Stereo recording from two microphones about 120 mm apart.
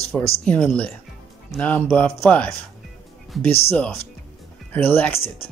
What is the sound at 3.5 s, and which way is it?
Speech, 55° left (ahead or behind).